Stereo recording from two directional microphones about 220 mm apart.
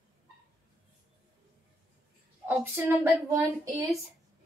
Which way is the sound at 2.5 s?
10° right (ahead or behind).